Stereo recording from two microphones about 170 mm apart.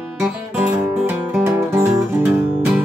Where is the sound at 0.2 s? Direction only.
10° right (ahead or behind).